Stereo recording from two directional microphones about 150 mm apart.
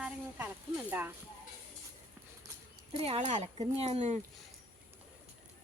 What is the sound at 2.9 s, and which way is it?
Speech, 40° right (ahead or behind).